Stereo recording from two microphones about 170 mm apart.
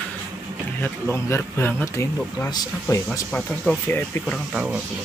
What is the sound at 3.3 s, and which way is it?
Speech, 5° left (ahead or behind).